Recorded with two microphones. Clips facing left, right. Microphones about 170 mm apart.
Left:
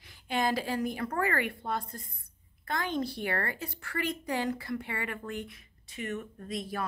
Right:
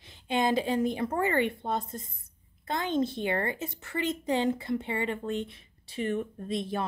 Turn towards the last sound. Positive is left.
turn(degrees=-25)  # may be behind; listen again after turning